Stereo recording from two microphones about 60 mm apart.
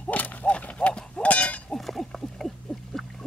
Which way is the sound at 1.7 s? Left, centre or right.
Centre.